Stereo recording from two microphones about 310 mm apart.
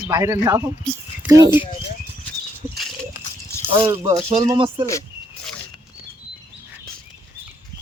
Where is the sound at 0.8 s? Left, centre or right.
Centre.